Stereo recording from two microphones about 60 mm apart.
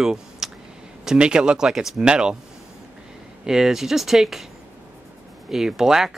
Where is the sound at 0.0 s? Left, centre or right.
Centre.